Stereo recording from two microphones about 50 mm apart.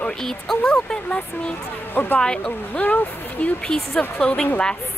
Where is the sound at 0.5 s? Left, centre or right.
Centre.